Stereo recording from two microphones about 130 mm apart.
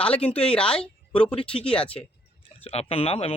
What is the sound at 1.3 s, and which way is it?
Speech, 45° left (ahead or behind).